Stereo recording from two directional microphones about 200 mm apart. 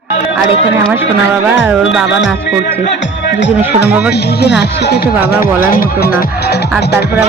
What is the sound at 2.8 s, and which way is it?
Music, 65° left (ahead or behind).